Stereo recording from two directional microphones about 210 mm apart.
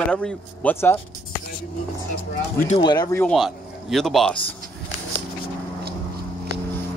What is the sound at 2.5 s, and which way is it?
Speech, 35° left (ahead or behind).